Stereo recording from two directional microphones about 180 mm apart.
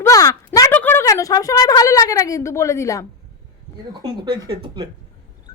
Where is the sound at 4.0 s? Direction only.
20° right (ahead or behind).